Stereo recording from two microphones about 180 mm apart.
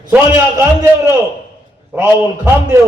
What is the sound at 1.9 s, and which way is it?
Speech, 10° right (ahead or behind).